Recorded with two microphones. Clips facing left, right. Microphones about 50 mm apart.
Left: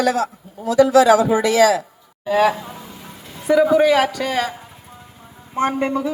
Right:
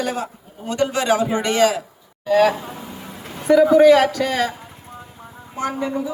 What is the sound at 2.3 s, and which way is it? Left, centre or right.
A man's voice, centre.